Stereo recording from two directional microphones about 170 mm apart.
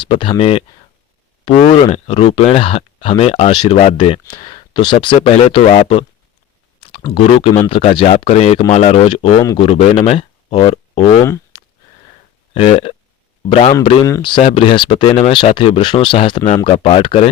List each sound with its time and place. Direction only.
0.0 s speech: 30° left (ahead or behind)
1.6 s speech: 30° left (ahead or behind)
9.4 s speech: 20° left (ahead or behind)
9.6 s speech: 35° left (ahead or behind)
11.5 s sniff: 25° left (ahead or behind)
12.5 s speech: 35° left (ahead or behind)